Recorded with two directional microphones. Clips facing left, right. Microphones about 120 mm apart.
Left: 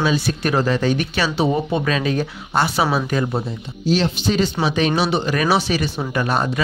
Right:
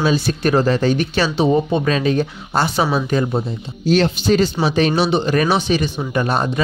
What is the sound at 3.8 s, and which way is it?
Speech, 50° right (ahead or behind).